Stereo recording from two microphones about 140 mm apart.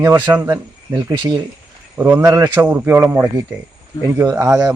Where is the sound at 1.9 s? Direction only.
15° right (ahead or behind).